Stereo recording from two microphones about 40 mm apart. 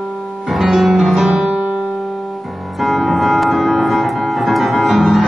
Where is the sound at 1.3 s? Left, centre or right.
Right.